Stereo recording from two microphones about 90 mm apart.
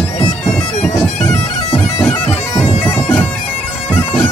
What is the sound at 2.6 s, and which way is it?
Bagpipes, 25° left (ahead or behind).